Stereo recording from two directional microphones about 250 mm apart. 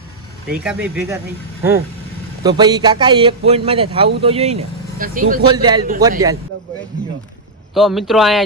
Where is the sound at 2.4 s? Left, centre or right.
Centre; by 5.4 s right.